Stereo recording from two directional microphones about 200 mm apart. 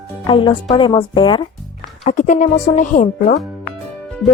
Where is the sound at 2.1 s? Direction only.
40° left (ahead or behind).